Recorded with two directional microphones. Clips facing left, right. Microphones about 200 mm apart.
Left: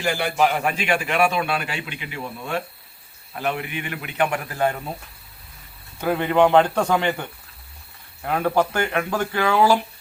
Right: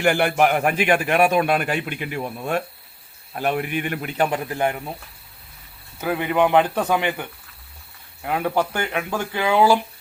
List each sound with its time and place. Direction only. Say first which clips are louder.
0.0 s a man's voice: right 3 dB; 60° right (ahead or behind); by 4.4 s 40° right (ahead or behind)
4.4 s speech: even; 15° right (ahead or behind)
6.0 s speech: left 2 dB; 10° right (ahead or behind)